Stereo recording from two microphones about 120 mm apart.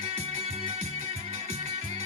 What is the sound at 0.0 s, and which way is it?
Music, 65° right (ahead or behind).